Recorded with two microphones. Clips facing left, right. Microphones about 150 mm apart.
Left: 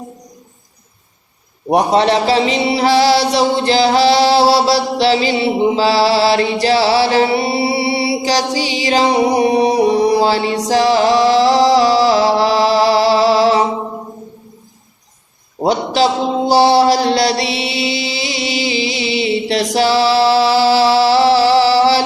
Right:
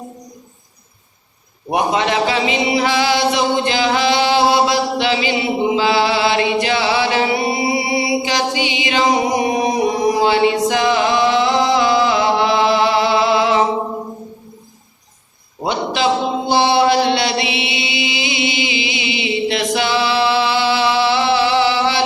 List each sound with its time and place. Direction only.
1.7 s speech: 35° left (ahead or behind)
15.6 s a sound: 40° left (ahead or behind)
16.5 s music: 40° left (ahead or behind)